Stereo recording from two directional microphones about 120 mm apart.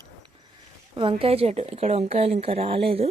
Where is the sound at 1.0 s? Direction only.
50° right (ahead or behind).